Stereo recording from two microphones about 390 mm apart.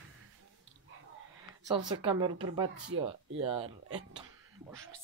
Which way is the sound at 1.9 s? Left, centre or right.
Centre.